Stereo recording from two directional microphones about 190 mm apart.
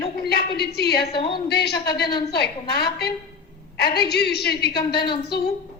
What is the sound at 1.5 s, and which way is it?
A woman's voice, 60° left (ahead or behind).